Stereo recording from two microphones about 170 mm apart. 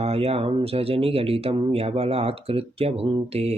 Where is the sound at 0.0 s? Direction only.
35° right (ahead or behind).